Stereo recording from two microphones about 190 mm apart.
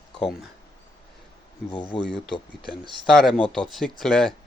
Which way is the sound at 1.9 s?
25° left (ahead or behind).